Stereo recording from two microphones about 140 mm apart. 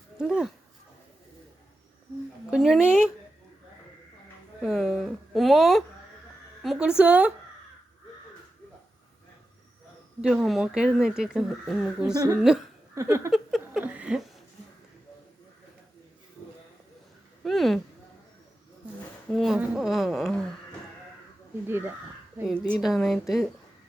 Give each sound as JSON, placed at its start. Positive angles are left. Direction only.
{"t": 0.2, "sound": "speech", "side_deg": -5}
{"t": 2.5, "sound": "speech", "side_deg": -5}
{"t": 4.6, "sound": "speech", "side_deg": 0}
{"t": 10.2, "sound": "speech", "side_deg": -5}
{"t": 12.1, "sound": "speech", "side_deg": -25}
{"t": 12.4, "sound": "speech", "side_deg": -5}
{"t": 12.9, "sound": "a sound", "side_deg": -20}
{"t": 13.3, "sound": "a sound", "side_deg": 0}
{"t": 17.4, "sound": "a sound", "side_deg": 0}
{"t": 19.3, "sound": "speech", "side_deg": 0}
{"t": 21.7, "sound": "speech", "side_deg": -15}
{"t": 22.8, "sound": "speech", "side_deg": 0}